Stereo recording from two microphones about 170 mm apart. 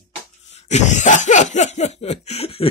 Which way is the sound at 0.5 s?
45° left (ahead or behind).